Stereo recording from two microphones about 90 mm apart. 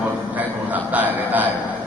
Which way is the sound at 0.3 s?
20° right (ahead or behind).